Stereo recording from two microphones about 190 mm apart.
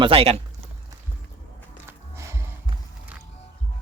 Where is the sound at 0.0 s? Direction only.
30° right (ahead or behind).